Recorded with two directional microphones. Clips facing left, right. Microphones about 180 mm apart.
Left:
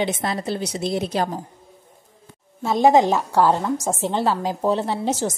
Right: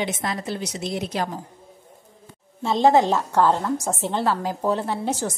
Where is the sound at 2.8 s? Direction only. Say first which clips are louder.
Left 2 dB; 15° left (ahead or behind).